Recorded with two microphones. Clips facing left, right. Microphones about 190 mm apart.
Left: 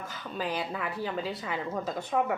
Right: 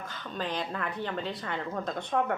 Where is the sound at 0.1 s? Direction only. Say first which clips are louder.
Left 1 dB; 10° left (ahead or behind).